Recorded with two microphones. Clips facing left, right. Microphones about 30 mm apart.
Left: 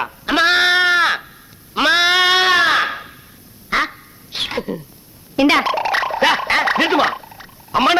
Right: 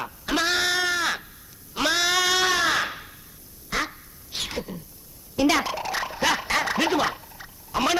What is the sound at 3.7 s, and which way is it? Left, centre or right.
Quack, left.